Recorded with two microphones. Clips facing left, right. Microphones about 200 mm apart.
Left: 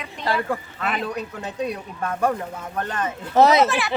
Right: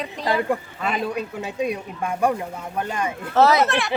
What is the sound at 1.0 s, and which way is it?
Speech, 10° right (ahead or behind).